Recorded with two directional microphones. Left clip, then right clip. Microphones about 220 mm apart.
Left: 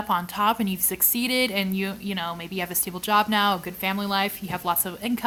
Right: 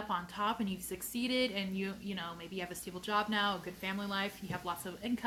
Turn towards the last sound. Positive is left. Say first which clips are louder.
# left 12 dB
turn(degrees=50)  # may be behind; listen again after turning